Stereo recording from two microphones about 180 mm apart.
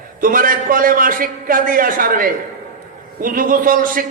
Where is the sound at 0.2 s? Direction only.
50° right (ahead or behind).